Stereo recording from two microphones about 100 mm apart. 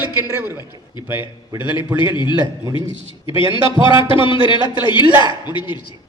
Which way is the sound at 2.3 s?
45° right (ahead or behind).